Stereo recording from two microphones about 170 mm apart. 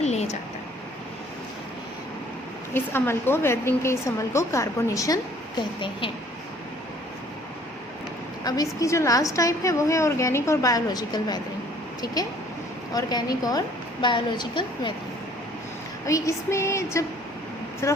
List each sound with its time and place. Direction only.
0.0 s a sound: 40° left (ahead or behind)
2.7 s a woman's voice: 15° left (ahead or behind)
8.4 s a woman's voice: 20° left (ahead or behind)
16.0 s a woman's voice: 20° left (ahead or behind)